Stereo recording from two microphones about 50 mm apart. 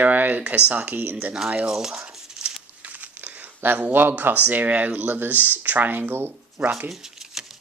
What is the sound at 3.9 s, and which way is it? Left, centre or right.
Speech, right.